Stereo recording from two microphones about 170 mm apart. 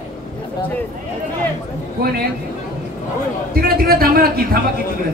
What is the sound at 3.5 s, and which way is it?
A woman's voice, 60° right (ahead or behind).